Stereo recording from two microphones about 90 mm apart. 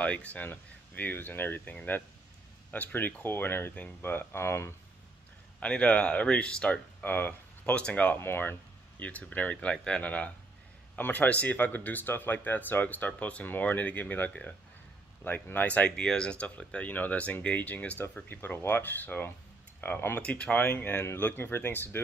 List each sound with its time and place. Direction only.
0.0 s speech: 15° left (ahead or behind)
5.6 s speech: 15° left (ahead or behind)
20.2 s speech: 10° left (ahead or behind)